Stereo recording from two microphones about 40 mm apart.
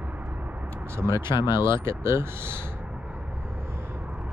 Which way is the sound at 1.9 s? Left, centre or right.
Right.